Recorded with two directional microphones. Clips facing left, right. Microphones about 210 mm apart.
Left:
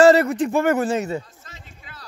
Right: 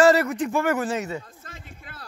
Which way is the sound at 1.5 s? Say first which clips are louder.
Right 2 dB; 55° right (ahead or behind).